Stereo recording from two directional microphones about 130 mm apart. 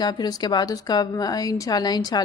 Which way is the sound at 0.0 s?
30° left (ahead or behind).